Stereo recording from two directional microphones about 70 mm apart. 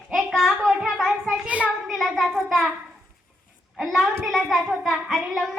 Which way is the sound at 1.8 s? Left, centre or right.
Centre.